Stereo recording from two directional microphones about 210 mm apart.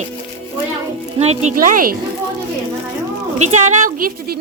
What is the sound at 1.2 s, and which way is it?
Speech, 30° right (ahead or behind).